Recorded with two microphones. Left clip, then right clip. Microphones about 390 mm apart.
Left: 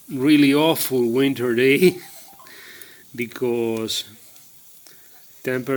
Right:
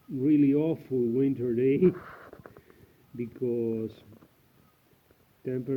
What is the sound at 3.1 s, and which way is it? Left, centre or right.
Speech, left.